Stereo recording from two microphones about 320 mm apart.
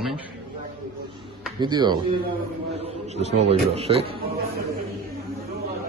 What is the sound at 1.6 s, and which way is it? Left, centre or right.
Speech, centre.